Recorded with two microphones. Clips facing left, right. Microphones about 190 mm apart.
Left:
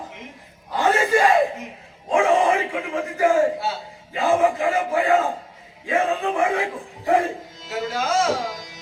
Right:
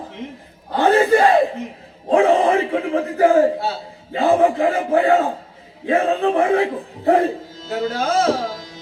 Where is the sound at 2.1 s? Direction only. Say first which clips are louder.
Right 4 dB; 35° right (ahead or behind).